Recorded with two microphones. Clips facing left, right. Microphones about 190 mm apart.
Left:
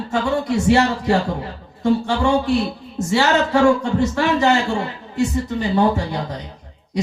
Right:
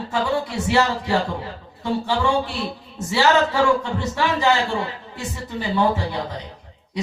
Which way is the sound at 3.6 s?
45° left (ahead or behind).